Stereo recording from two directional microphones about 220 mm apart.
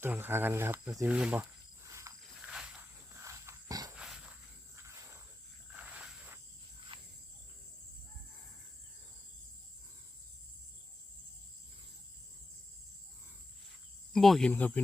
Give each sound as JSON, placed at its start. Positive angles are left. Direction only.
{"t": 0.0, "sound": "speech", "side_deg": -10}
{"t": 0.9, "sound": "snake", "side_deg": -5}
{"t": 3.9, "sound": "a sound", "side_deg": -5}
{"t": 5.7, "sound": "a sound", "side_deg": -5}
{"t": 6.7, "sound": "cricket", "side_deg": -25}
{"t": 14.1, "sound": "speech", "side_deg": 0}